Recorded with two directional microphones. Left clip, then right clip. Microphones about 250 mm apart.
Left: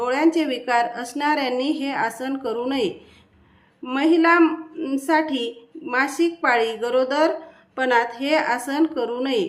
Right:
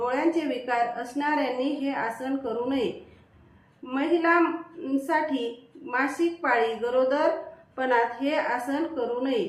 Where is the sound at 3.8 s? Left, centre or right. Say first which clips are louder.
Left 6 dB; left.